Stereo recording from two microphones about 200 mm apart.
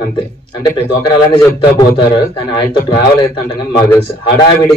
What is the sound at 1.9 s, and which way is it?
A man's voice, 20° left (ahead or behind).